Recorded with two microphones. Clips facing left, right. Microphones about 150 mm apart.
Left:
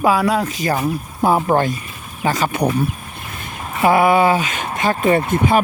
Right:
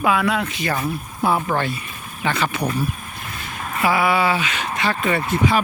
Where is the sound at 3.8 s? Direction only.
45° left (ahead or behind).